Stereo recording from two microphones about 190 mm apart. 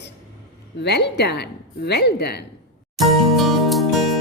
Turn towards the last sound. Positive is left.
turn(degrees=0)  # may be behind; listen again after turning